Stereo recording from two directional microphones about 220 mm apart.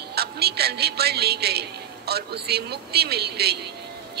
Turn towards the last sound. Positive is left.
turn(degrees=-45)  # may be behind; listen again after turning